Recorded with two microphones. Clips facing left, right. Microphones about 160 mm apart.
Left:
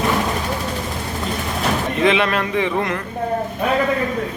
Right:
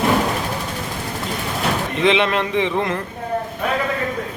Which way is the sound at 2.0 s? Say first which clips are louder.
Right 1 dB; 20° right (ahead or behind).